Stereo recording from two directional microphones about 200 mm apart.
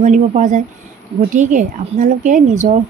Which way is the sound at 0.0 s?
35° right (ahead or behind).